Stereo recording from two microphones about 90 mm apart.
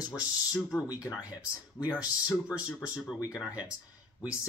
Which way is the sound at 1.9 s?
15° right (ahead or behind).